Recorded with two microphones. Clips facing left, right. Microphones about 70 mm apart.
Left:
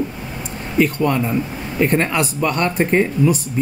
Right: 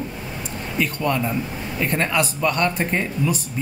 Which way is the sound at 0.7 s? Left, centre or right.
Left.